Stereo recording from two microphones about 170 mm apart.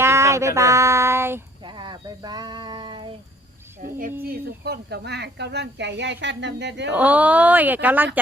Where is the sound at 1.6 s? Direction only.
25° right (ahead or behind).